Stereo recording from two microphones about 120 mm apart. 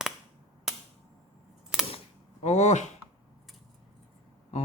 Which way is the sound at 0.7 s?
5° right (ahead or behind).